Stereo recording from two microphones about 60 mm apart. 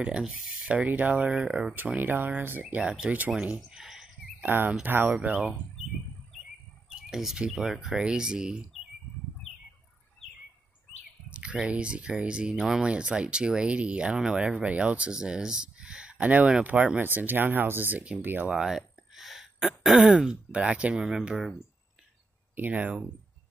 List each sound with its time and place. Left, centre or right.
0.3 s speech: right
1.7 s speech: right
2.8 s speech: centre
3.6 s a sound: centre
4.5 s speech: right
6.9 s speech: centre
11.2 s speech: centre; by 18.5 s right
18.5 s throat clearing: centre
20.2 s speech: centre
20.9 s speech: centre
22.6 s speech: right